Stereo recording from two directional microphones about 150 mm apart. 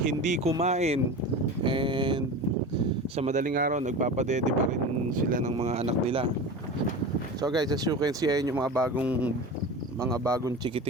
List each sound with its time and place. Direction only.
0.0 s speech: 55° right (ahead or behind)
1.6 s a sound: 30° right (ahead or behind)
3.2 s speech: 55° right (ahead or behind)
5.5 s speech: 45° right (ahead or behind)
7.4 s speech: 25° right (ahead or behind)
9.0 s speech: 10° right (ahead or behind)
10.1 s speech: 20° right (ahead or behind)